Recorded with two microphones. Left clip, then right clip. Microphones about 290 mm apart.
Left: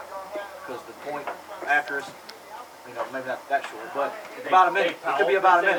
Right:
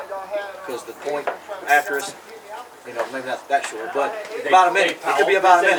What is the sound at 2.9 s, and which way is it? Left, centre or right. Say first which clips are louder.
A man's voice: right 5 dB; centre.